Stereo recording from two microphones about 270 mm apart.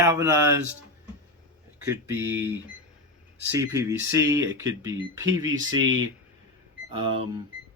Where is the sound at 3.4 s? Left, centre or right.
Centre.